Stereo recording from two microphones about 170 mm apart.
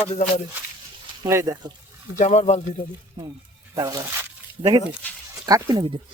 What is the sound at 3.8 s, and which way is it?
Speech, 20° right (ahead or behind).